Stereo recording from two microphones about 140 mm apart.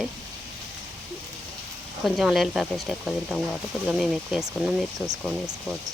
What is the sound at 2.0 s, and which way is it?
Speech, 5° right (ahead or behind).